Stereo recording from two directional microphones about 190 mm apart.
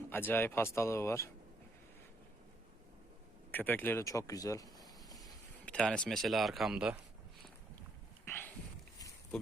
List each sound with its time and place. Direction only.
0.1 s speech: 10° left (ahead or behind)
3.5 s speech: 10° left (ahead or behind)
5.6 s a man's voice: 5° left (ahead or behind)
8.2 s a sound: 10° left (ahead or behind)